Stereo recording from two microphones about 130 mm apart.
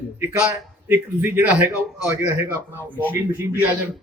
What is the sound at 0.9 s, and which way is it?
A man's voice, 15° right (ahead or behind).